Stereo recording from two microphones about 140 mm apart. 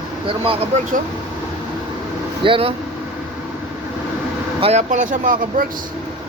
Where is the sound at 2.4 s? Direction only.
40° right (ahead or behind).